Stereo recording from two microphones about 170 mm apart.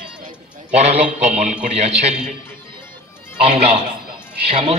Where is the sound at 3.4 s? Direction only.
35° right (ahead or behind).